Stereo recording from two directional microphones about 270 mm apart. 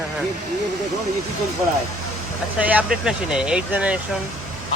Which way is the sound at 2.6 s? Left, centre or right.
Centre.